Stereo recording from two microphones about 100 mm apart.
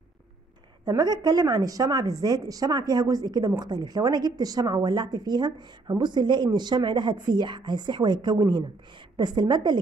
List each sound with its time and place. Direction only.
0.8 s a woman's voice: 40° right (ahead or behind)